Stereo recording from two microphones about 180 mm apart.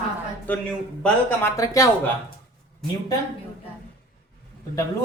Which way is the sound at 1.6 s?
20° left (ahead or behind).